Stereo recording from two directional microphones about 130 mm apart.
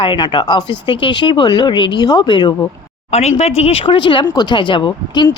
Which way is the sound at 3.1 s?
55° left (ahead or behind).